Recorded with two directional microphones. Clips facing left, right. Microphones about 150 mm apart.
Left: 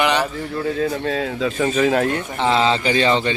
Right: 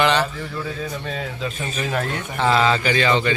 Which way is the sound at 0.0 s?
15° left (ahead or behind).